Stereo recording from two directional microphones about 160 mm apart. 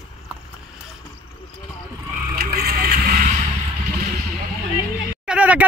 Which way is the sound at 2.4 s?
70° right (ahead or behind).